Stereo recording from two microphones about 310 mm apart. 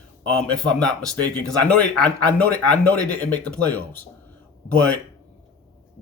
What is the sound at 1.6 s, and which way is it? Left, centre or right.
Speech, centre.